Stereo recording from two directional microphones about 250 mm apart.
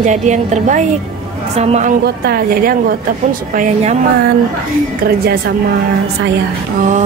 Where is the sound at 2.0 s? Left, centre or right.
Right.